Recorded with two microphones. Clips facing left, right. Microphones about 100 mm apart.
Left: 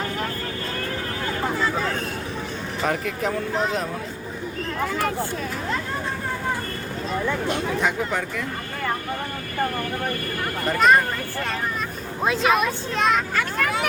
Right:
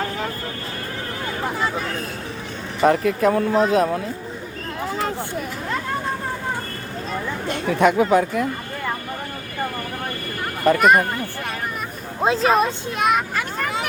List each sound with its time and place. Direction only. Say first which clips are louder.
2.8 s speech: right 9 dB; 45° right (ahead or behind)
4.9 s speech: right 3 dB; 25° right (ahead or behind)
7.5 s speech: right 6 dB; 60° right (ahead or behind)
10.8 s speech: even; 10° right (ahead or behind)
12.2 s speech: right 3 dB; 30° right (ahead or behind)
13.0 s speech: right 2 dB; 10° right (ahead or behind)